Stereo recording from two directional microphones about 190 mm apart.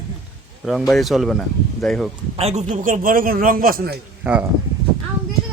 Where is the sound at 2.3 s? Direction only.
35° right (ahead or behind); by 3.9 s 50° right (ahead or behind).